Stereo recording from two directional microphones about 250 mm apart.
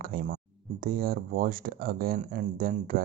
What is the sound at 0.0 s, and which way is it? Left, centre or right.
Speech, right.